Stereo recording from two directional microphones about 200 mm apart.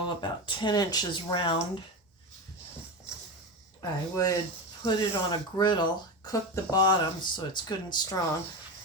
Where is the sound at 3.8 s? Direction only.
15° left (ahead or behind).